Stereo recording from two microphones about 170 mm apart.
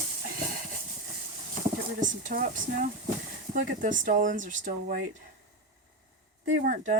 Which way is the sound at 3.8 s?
50° right (ahead or behind).